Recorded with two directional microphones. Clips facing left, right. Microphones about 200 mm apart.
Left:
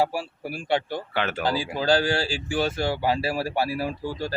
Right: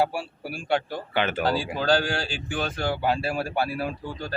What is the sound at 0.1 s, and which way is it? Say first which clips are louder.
Speech: left 2 dB; centre (ahead or behind).